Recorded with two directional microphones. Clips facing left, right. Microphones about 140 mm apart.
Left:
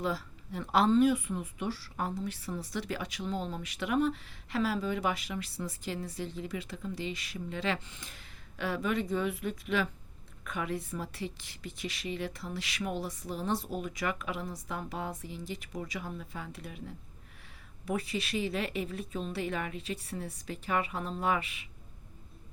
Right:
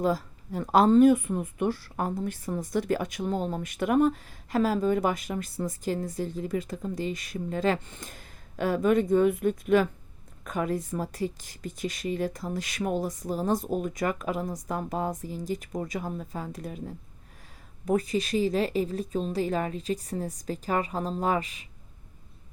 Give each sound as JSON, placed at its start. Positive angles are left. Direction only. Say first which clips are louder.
{"t": 0.0, "sound": "speech", "louder": "right 7 dB", "side_deg": -45}